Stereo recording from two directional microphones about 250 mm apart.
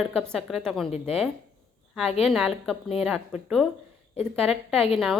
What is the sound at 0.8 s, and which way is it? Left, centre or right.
Speech, left.